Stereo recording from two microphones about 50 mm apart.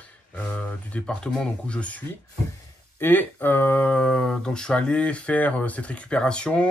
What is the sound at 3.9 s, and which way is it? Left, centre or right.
Speech, centre.